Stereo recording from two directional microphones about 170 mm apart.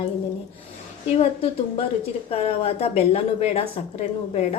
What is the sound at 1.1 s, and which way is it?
A woman's voice, 35° left (ahead or behind).